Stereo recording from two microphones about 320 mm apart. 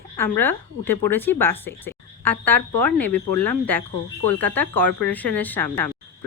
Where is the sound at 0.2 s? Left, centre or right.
Centre.